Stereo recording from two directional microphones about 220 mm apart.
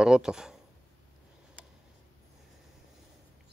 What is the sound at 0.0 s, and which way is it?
Speech, 5° right (ahead or behind).